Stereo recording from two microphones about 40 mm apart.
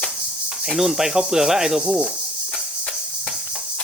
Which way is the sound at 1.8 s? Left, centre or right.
Right.